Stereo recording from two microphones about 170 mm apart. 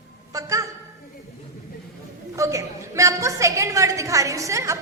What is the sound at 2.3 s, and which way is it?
A woman's voice, 20° right (ahead or behind).